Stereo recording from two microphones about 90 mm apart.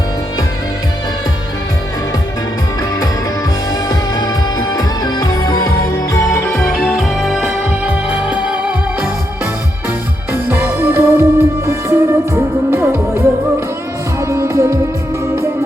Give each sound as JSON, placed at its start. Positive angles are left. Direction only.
{"t": 4.7, "sound": "music", "side_deg": 45}
{"t": 6.7, "sound": "music", "side_deg": -5}
{"t": 10.3, "sound": "music", "side_deg": -30}